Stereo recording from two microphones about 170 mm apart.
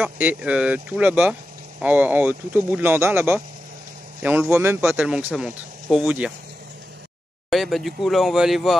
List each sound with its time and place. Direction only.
0.0 s speech: 10° right (ahead or behind)
7.4 s speech: centre (ahead or behind)